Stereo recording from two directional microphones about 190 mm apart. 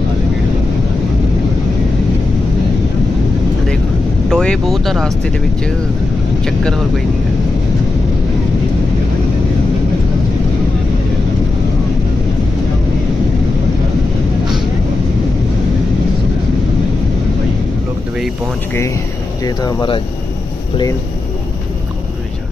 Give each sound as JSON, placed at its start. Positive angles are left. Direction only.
{"t": 4.3, "sound": "speech", "side_deg": 5}
{"t": 19.4, "sound": "speech", "side_deg": 20}